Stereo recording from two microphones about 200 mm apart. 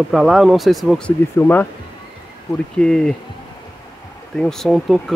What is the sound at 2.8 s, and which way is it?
Speech, 5° left (ahead or behind).